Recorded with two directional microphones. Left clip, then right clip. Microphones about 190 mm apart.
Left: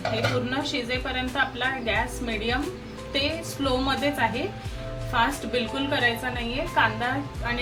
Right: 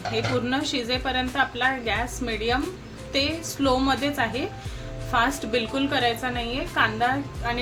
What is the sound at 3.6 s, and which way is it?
A woman's voice, 35° right (ahead or behind).